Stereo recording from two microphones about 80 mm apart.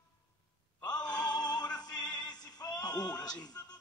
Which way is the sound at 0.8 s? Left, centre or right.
Left.